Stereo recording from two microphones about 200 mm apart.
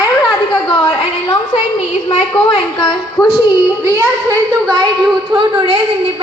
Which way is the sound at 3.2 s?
5° left (ahead or behind).